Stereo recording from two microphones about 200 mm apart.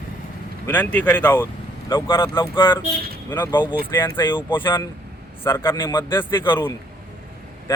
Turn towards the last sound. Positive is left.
turn(degrees=10)  # may be behind; listen again after turning